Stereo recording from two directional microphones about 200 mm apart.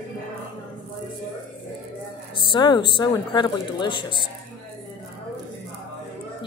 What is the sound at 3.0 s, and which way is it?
A woman's voice, 20° left (ahead or behind).